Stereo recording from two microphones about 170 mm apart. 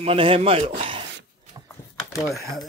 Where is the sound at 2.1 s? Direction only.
Centre (ahead or behind).